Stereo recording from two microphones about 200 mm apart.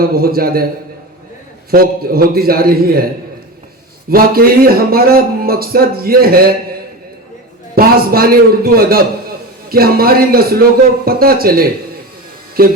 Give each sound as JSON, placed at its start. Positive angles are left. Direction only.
{"t": 0.0, "sound": "speech", "side_deg": -50}
{"t": 1.7, "sound": "speech", "side_deg": -50}
{"t": 4.1, "sound": "speech", "side_deg": -50}
{"t": 7.8, "sound": "speech", "side_deg": -50}